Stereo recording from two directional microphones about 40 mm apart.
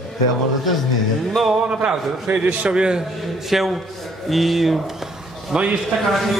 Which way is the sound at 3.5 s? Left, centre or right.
Centre.